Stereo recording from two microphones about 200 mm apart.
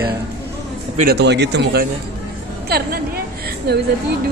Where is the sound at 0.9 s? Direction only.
50° right (ahead or behind).